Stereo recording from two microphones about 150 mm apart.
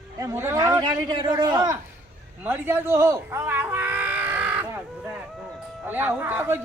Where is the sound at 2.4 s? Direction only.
15° right (ahead or behind).